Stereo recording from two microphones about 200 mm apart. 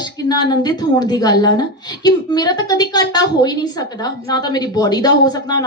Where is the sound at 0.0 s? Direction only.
20° left (ahead or behind).